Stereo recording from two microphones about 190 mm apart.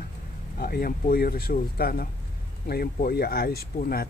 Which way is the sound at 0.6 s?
50° left (ahead or behind).